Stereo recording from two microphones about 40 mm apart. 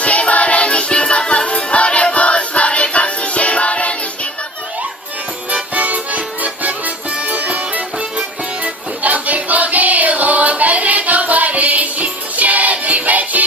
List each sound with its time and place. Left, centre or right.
0.0 s music: left
5.5 s music: right
7.1 s music: right
7.3 s music: right